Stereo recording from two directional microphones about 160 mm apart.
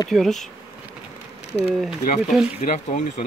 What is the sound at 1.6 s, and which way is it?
Speech, centre (ahead or behind).